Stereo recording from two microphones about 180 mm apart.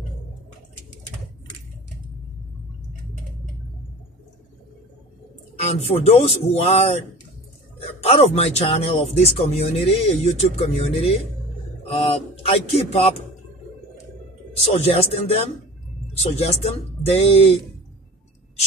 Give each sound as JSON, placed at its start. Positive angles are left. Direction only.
{"t": 5.9, "sound": "speech", "side_deg": 35}
{"t": 14.6, "sound": "speech", "side_deg": 35}